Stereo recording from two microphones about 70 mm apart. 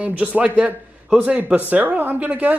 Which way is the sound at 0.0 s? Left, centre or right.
Right.